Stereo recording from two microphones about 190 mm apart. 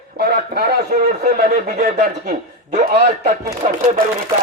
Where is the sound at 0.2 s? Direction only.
55° right (ahead or behind).